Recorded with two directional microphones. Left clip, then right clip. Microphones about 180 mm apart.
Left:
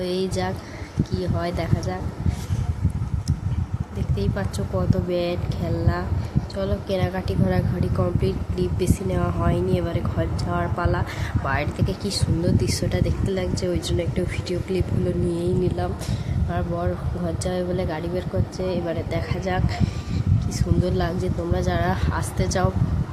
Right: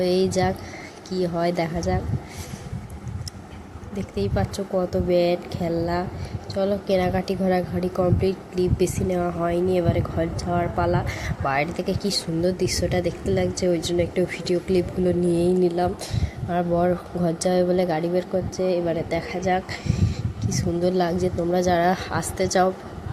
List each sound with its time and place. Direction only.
0.0 s speech: 20° right (ahead or behind)
4.1 s speech: 20° right (ahead or behind)